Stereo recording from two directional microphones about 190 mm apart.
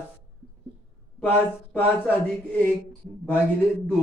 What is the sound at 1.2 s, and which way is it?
A man's voice, 10° left (ahead or behind).